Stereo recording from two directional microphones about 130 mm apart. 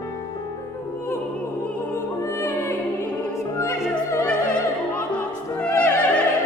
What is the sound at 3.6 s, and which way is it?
Opera, 10° left (ahead or behind).